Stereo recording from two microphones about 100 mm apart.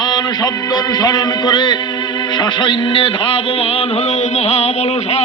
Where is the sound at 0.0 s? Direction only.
45° left (ahead or behind).